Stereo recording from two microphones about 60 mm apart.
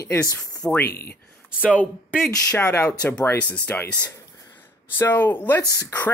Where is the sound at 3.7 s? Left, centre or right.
Left.